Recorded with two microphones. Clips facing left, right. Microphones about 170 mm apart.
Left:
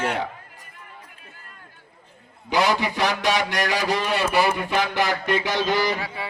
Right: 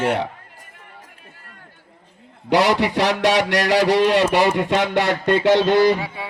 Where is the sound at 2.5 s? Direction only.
85° right; by 5.7 s 65° right (ahead or behind).